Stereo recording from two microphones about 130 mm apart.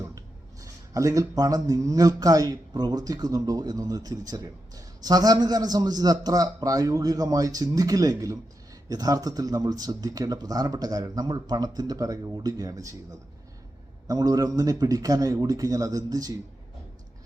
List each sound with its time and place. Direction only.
0.0 s speech: 25° right (ahead or behind)
14.1 s speech: 30° right (ahead or behind)